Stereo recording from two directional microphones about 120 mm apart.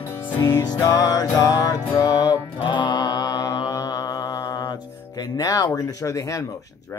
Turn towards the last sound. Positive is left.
turn(degrees=30)  # may be behind; listen again after turning